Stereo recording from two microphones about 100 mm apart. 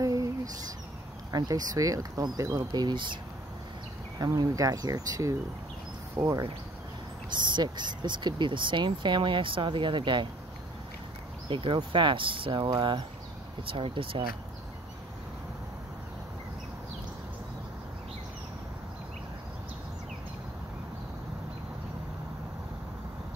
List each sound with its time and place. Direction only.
0.0 s a sound: 35° right (ahead or behind)
1.3 s speech: 40° right (ahead or behind)
4.2 s speech: 35° right (ahead or behind)
7.2 s speech: 50° right (ahead or behind)
11.4 s speech: 55° right (ahead or behind)
13.7 s speech: 65° right (ahead or behind)